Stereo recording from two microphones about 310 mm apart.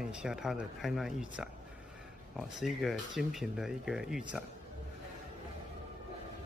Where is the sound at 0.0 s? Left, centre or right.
Centre.